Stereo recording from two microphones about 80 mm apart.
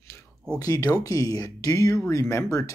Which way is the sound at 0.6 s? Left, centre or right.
Left.